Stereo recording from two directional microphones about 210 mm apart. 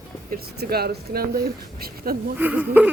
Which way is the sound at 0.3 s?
50° right (ahead or behind).